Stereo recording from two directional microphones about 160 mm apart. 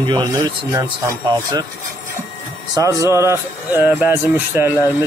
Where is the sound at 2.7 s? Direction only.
20° right (ahead or behind).